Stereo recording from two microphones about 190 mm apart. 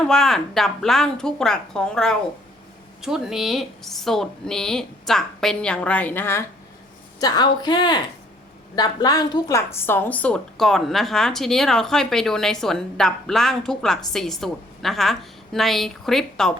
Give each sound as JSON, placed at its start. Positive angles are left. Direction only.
{"t": 0.1, "sound": "a woman's voice", "side_deg": 0}